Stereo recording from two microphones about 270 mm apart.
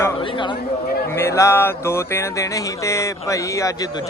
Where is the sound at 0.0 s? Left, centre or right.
Centre.